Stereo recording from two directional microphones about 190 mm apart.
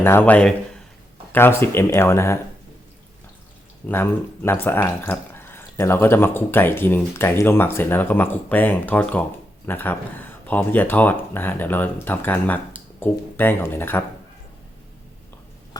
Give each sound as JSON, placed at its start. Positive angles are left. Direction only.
{"t": 0.0, "sound": "speech", "side_deg": 10}
{"t": 3.8, "sound": "speech", "side_deg": 10}
{"t": 15.7, "sound": "mouse", "side_deg": 20}